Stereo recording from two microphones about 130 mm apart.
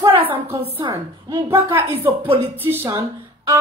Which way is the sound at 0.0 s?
45° right (ahead or behind).